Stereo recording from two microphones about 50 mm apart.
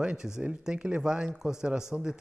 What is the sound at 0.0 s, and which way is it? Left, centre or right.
A man's voice, centre.